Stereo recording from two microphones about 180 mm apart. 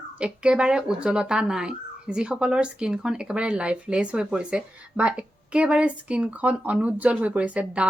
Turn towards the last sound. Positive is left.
turn(degrees=-5)  # may be behind; listen again after turning